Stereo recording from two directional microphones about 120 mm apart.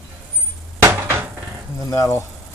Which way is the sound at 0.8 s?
20° right (ahead or behind).